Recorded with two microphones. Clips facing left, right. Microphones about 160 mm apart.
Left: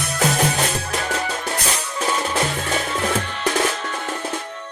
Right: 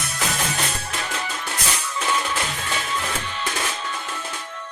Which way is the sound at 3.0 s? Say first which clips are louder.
Left 6 dB; 50° left (ahead or behind).